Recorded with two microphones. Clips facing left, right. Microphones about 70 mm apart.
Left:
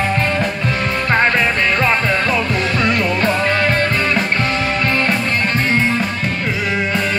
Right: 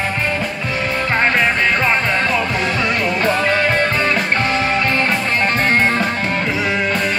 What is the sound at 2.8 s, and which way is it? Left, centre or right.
Music, right.